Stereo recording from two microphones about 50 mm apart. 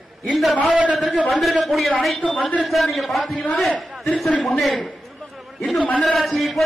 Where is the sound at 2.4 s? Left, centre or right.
Left.